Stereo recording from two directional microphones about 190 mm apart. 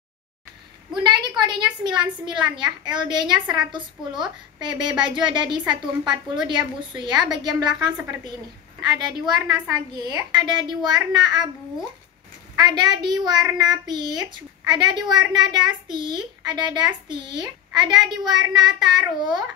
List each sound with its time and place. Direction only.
1.0 s a woman's voice: 25° right (ahead or behind)
8.9 s a woman's voice: 20° right (ahead or behind)
12.5 s a woman's voice: 20° right (ahead or behind)